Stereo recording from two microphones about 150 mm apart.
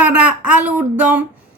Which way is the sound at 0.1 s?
10° right (ahead or behind).